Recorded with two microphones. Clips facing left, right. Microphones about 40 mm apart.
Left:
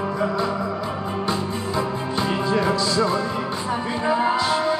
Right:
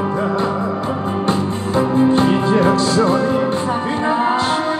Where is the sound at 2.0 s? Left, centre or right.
Right.